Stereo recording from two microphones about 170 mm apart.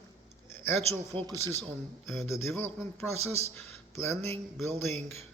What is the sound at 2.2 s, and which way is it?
Speech, 15° left (ahead or behind).